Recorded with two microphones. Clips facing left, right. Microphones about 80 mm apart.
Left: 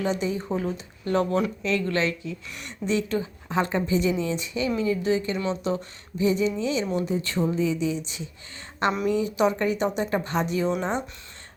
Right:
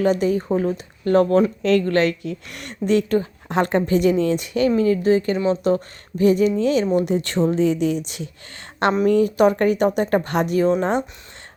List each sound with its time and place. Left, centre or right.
0.0 s speech: right
0.5 s speech: right
4.8 s speech: right
6.9 s speech: right
8.9 s speech: right